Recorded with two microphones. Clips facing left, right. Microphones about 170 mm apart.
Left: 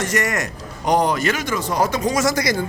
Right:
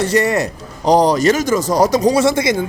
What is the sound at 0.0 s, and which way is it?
Speech, 30° right (ahead or behind).